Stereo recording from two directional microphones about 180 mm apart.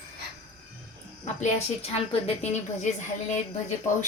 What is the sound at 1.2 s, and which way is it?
A woman's voice, 35° left (ahead or behind).